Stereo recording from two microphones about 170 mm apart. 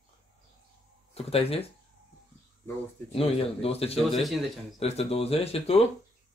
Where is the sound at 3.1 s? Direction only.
35° left (ahead or behind).